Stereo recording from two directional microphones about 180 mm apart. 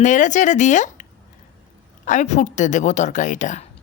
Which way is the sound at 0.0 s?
45° left (ahead or behind).